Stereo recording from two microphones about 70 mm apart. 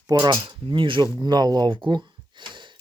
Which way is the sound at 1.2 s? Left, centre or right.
Right.